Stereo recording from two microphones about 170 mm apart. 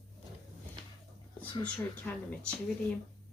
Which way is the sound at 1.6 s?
10° left (ahead or behind).